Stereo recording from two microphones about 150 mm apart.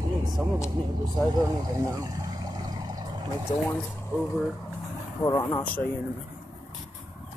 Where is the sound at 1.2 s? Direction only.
25° right (ahead or behind).